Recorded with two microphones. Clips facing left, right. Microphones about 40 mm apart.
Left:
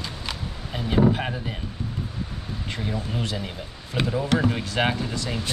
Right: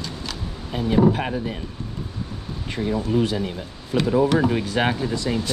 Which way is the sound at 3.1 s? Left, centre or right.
Centre.